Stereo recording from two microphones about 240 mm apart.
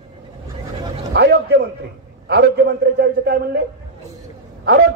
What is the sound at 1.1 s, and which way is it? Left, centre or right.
A man's voice, right.